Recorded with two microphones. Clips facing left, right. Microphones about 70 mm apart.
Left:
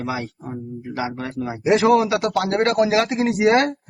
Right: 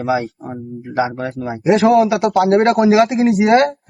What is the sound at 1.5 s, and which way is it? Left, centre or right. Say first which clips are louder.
Speech: right 3 dB; centre.